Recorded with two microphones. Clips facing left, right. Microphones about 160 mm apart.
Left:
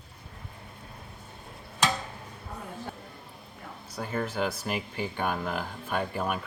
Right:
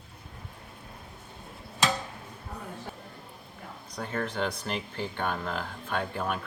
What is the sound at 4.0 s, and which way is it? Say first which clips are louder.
Speech: left 1 dB; 5° left (ahead or behind).